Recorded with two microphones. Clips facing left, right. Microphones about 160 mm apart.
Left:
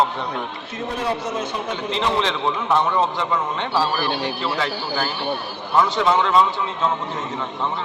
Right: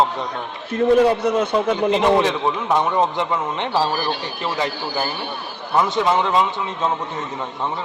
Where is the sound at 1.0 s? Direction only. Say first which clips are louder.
Right 8 dB; 60° right (ahead or behind).